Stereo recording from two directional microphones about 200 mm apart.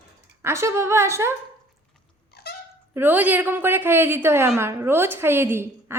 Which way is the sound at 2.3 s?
55° left (ahead or behind).